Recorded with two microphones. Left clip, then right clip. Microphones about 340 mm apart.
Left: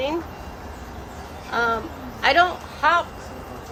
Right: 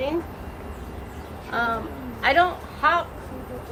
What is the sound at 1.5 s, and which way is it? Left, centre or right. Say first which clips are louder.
A woman's voice: left 3 dB; left.